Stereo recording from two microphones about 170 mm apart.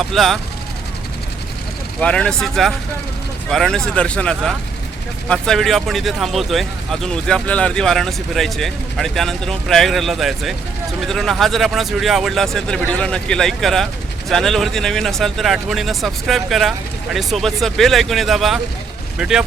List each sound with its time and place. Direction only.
0.0 s speech: centre (ahead or behind)
2.0 s speech: 5° left (ahead or behind)